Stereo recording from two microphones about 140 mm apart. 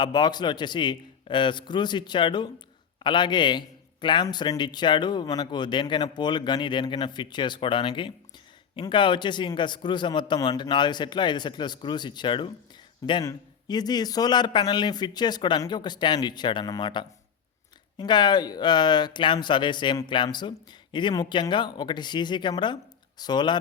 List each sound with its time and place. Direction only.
0.0 s speech: 30° left (ahead or behind)